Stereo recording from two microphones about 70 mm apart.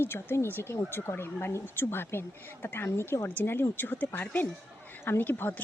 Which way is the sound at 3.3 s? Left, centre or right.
Left.